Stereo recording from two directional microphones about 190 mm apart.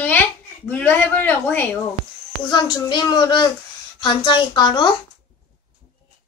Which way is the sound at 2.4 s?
20° left (ahead or behind).